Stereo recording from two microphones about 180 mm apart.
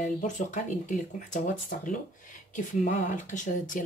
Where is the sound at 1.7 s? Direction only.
55° left (ahead or behind).